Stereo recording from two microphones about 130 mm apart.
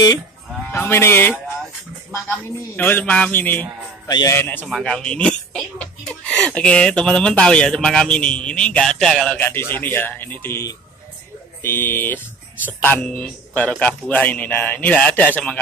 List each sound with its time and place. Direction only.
0.7 s speech: 20° left (ahead or behind)
2.7 s speech: 15° left (ahead or behind)
4.6 s speech: 5° left (ahead or behind)